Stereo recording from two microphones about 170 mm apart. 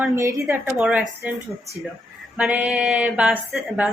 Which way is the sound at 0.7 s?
5° right (ahead or behind).